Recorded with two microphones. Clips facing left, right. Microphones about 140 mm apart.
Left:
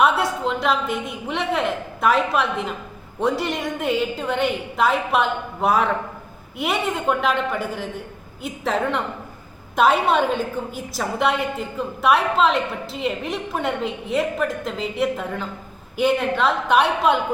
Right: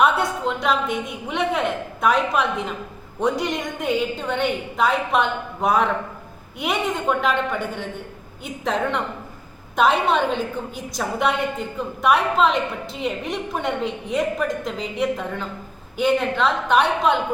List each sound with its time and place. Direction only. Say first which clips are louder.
0.0 s a woman's voice: even; centre (ahead or behind)